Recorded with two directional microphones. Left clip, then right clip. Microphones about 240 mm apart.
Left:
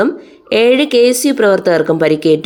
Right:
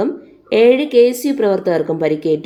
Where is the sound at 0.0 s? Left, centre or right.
Centre.